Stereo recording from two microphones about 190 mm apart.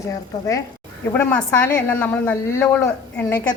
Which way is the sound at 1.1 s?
10° left (ahead or behind).